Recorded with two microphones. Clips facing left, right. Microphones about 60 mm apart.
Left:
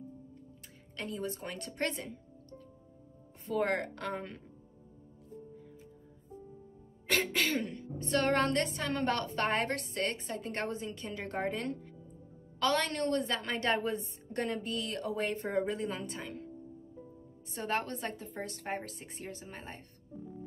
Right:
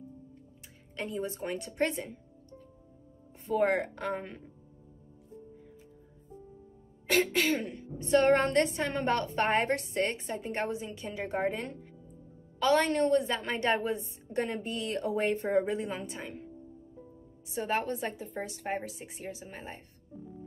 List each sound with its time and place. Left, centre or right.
0.9 s a woman's voice: right
7.1 s a woman's voice: centre
8.2 s a woman's voice: right
10.4 s a woman's voice: centre
14.6 s a woman's voice: right
17.5 s a woman's voice: centre